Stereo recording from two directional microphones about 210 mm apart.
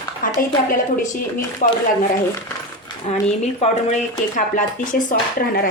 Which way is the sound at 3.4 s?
30° left (ahead or behind).